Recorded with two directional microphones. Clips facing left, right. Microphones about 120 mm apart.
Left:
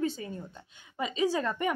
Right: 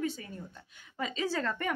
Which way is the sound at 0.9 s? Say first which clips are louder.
Left 4 dB; 15° left (ahead or behind).